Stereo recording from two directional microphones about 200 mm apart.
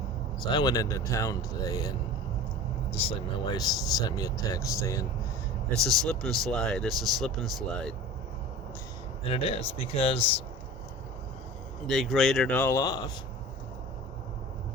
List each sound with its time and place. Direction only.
0.4 s speech: 20° left (ahead or behind)
2.9 s speech: 25° left (ahead or behind)
6.1 s speech: centre (ahead or behind)
9.3 s speech: 30° left (ahead or behind)
11.9 s speech: centre (ahead or behind); by 13.0 s 15° left (ahead or behind)